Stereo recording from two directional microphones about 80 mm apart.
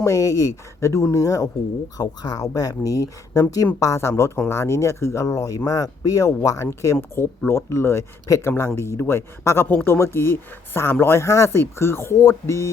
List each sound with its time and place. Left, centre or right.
0.0 s speech: left